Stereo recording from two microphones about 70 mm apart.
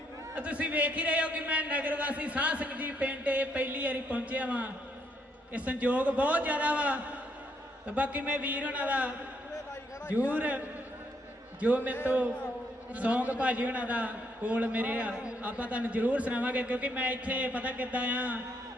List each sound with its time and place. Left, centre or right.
0.3 s a man's voice: centre
11.6 s a man's voice: right